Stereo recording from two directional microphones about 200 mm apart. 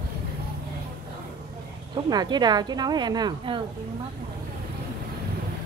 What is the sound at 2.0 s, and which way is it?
A woman's voice, 20° right (ahead or behind).